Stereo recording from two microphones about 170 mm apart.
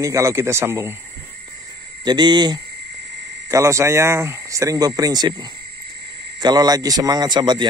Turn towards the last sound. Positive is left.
turn(degrees=-25)  # may be behind; listen again after turning